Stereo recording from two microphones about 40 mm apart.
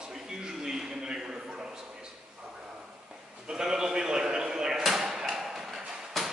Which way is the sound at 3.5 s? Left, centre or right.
Centre.